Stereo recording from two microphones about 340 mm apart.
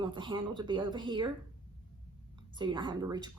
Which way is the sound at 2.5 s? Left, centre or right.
Centre.